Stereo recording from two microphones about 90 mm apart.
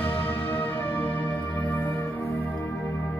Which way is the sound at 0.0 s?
20° left (ahead or behind).